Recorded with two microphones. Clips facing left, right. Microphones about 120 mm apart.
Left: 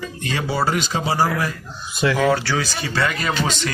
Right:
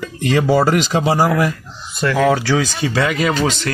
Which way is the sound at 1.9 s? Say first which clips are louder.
Right 3 dB; 5° left (ahead or behind).